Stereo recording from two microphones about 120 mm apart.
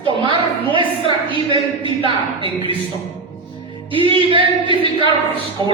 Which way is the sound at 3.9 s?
45° right (ahead or behind).